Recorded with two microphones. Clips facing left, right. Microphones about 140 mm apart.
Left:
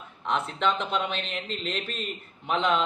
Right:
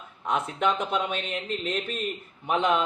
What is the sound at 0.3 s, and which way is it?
Speech, 10° right (ahead or behind).